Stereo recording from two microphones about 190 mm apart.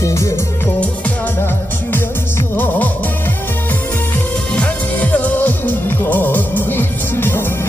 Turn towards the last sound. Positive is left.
turn(degrees=10)  # may be behind; listen again after turning